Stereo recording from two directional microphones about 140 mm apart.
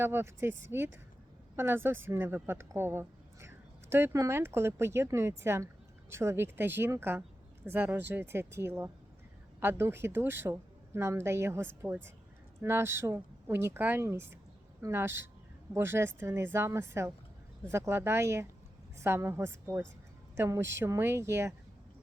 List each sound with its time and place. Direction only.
0.0 s a woman's voice: 15° right (ahead or behind)